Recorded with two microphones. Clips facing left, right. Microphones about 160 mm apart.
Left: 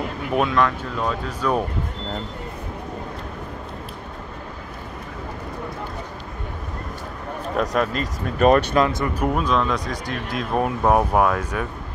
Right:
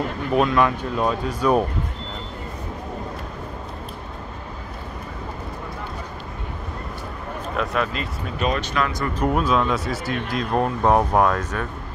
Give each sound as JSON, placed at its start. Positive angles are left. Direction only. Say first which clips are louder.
{"t": 0.6, "sound": "speech", "louder": "right 1 dB", "side_deg": -15}
{"t": 7.5, "sound": "speech", "louder": "left 3 dB", "side_deg": 40}
{"t": 8.7, "sound": "speech", "louder": "left 4 dB", "side_deg": 25}
{"t": 9.2, "sound": "speech", "louder": "right 2 dB", "side_deg": -5}